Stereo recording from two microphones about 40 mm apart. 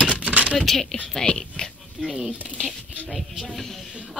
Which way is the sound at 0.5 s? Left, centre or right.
Centre.